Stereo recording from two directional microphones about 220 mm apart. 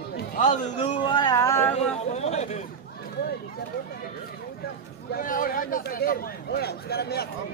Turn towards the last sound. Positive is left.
turn(degrees=45)  # may be behind; listen again after turning